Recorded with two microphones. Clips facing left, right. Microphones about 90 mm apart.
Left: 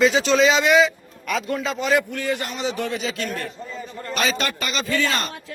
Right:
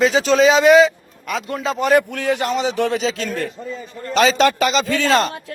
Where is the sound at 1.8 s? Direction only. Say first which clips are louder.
Right 6 dB; 65° right (ahead or behind).